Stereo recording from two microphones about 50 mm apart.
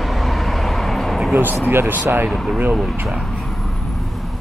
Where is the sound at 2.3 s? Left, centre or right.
Centre.